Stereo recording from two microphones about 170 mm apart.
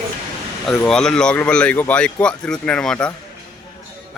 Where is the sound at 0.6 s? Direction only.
5° left (ahead or behind).